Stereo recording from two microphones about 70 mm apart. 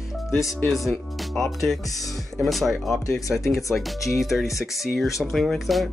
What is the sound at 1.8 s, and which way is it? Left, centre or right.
Speech, left.